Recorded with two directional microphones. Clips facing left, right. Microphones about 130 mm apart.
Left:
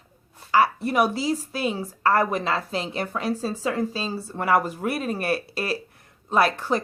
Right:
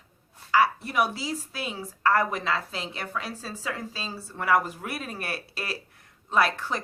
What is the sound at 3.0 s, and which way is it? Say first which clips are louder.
Speech: left 8 dB; 20° left (ahead or behind).